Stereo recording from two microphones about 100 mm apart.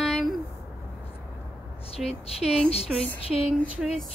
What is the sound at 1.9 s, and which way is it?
Speech, 90° left.